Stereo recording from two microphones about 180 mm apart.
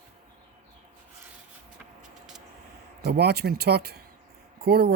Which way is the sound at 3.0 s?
65° right (ahead or behind).